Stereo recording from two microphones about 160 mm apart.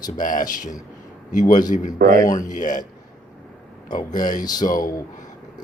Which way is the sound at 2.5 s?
55° left (ahead or behind).